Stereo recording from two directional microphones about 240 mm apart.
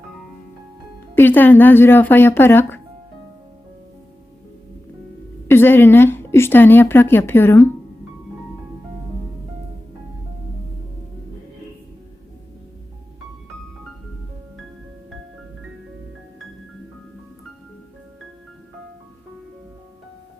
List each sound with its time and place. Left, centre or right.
1.1 s a woman's voice: centre
5.5 s a woman's voice: centre